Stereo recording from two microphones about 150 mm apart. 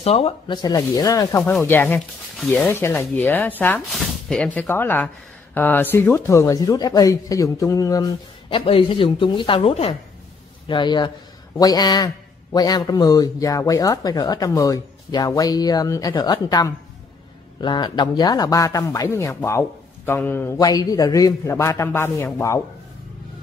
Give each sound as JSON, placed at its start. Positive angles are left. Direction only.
{"t": 0.0, "sound": "speech", "side_deg": 40}
{"t": 0.6, "sound": "speech", "side_deg": 25}
{"t": 8.5, "sound": "speech", "side_deg": 35}
{"t": 10.7, "sound": "speech", "side_deg": 30}
{"t": 20.5, "sound": "speech", "side_deg": 25}